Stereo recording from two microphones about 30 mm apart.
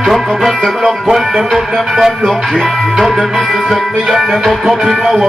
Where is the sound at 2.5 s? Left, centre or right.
Centre.